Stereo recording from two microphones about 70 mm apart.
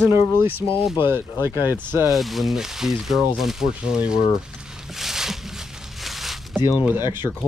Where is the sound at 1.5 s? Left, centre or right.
Left.